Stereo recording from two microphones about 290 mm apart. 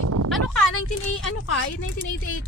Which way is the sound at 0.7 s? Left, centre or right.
Left.